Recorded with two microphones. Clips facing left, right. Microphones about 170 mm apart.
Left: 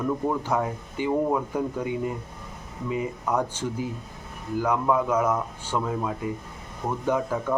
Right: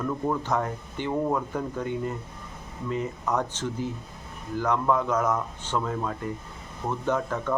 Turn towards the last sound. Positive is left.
turn(degrees=10)  # may be behind; listen again after turning